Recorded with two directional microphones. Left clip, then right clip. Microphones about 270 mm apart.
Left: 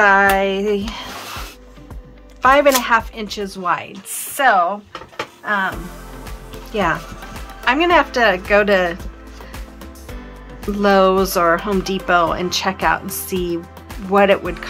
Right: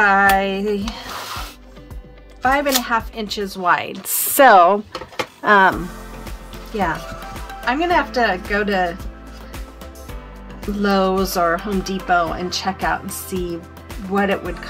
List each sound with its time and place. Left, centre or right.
0.0 s speech: centre
2.4 s speech: centre
4.6 s speech: right
5.5 s speech: right
6.2 s music: centre
7.6 s speech: centre
10.6 s speech: centre